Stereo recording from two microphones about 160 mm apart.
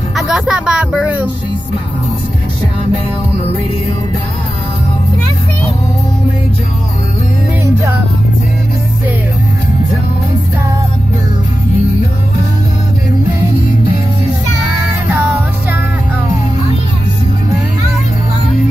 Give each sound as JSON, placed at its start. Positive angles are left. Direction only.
{"t": 0.1, "sound": "speech", "side_deg": -5}
{"t": 7.6, "sound": "music", "side_deg": -15}
{"t": 15.0, "sound": "music", "side_deg": -10}